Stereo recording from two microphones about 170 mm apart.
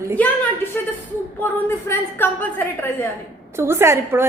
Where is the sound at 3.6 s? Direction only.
15° right (ahead or behind).